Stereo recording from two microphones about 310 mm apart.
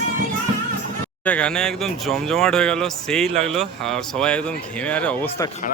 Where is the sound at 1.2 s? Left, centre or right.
Centre.